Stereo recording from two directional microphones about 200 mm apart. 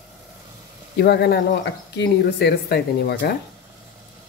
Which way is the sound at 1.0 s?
55° left (ahead or behind).